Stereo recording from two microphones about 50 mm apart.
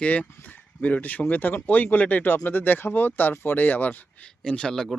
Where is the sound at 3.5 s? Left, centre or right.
Left.